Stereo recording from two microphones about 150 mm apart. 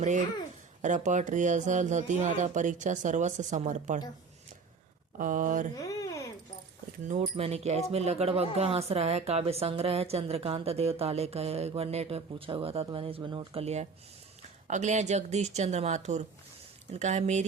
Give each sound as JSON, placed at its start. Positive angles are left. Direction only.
{"t": 0.0, "sound": "a woman's voice", "side_deg": -55}
{"t": 5.1, "sound": "speech", "side_deg": -60}
{"t": 5.7, "sound": "a sound", "side_deg": 20}
{"t": 7.1, "sound": "a woman's voice", "side_deg": -45}